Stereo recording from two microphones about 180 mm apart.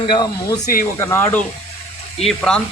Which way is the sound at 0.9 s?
15° left (ahead or behind).